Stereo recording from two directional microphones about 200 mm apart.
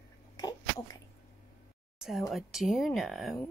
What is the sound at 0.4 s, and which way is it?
Sneeze, 20° left (ahead or behind).